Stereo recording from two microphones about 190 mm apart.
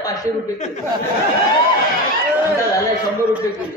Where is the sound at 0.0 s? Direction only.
20° left (ahead or behind).